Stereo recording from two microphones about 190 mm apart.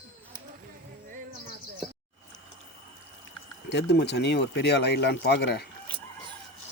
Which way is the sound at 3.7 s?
65° left (ahead or behind).